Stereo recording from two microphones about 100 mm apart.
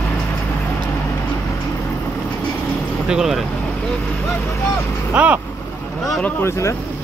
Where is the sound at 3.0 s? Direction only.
5° right (ahead or behind).